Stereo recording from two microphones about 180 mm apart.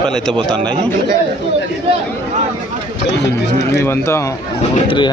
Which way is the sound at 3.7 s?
15° left (ahead or behind).